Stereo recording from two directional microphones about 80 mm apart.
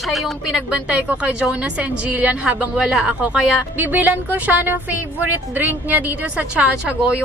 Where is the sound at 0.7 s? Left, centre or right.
Centre.